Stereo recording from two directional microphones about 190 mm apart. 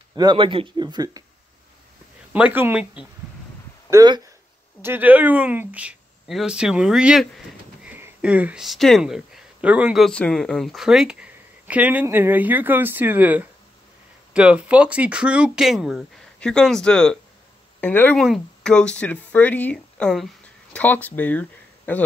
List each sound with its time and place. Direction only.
0.1 s speech: 20° right (ahead or behind)
2.3 s speech: 10° right (ahead or behind)
3.9 s speech: 20° right (ahead or behind)
4.8 s speech: 10° right (ahead or behind); by 22.0 s 10° left (ahead or behind)